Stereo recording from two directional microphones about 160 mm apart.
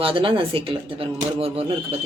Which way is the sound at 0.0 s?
35° right (ahead or behind).